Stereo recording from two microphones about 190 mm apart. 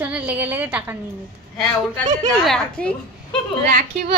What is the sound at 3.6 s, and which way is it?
Speech, 45° right (ahead or behind).